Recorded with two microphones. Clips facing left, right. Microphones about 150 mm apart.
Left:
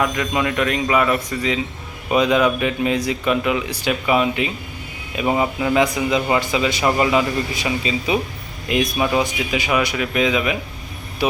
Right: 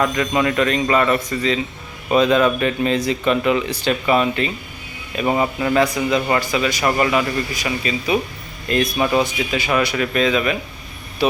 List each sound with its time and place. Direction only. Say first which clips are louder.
0.0 s speech: right 2 dB; 5° left (ahead or behind)